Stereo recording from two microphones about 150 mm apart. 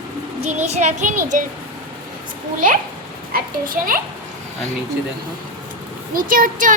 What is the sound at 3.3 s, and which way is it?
Speech, 70° right (ahead or behind).